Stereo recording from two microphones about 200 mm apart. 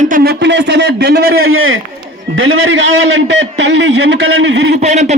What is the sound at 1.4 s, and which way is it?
Speech, 90° right.